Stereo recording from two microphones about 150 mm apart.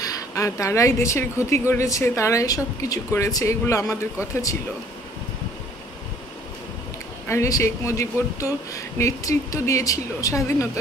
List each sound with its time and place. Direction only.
0.0 s speech: 25° left (ahead or behind)
7.2 s speech: 20° left (ahead or behind)